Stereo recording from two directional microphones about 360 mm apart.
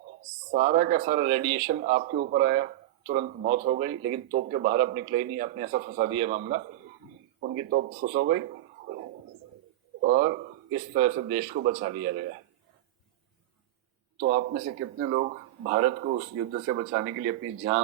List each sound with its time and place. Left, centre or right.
0.5 s speech: right
10.0 s speech: right
14.2 s speech: right
16.6 s speech: right